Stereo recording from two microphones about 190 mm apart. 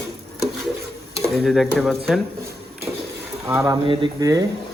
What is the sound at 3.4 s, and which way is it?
Speech, 15° right (ahead or behind).